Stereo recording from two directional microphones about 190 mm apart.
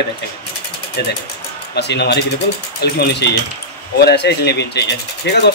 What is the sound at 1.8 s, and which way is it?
Speech, 60° left (ahead or behind).